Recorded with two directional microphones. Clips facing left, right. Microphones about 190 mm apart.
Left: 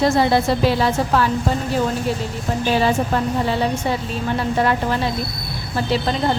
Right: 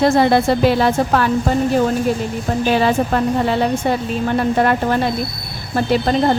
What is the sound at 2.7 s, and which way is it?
A woman's voice, 55° right (ahead or behind).